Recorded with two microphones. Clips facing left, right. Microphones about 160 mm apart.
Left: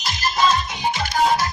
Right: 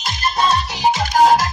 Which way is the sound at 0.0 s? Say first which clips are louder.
Right 1 dB; 60° right (ahead or behind).